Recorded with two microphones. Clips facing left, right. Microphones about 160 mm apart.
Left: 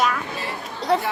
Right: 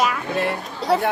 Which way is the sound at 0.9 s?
Centre (ahead or behind).